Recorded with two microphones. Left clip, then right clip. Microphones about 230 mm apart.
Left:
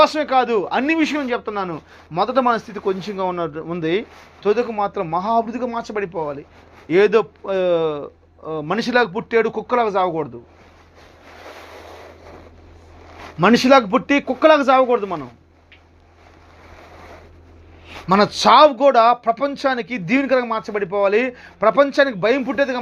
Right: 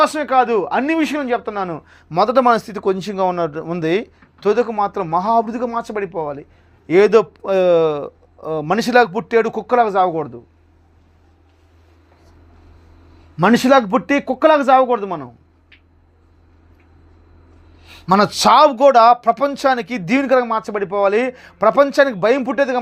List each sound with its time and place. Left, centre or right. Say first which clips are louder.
0.0 s speech: right 1 dB; right
13.3 s speech: even; right
17.8 s speech: right 2 dB; right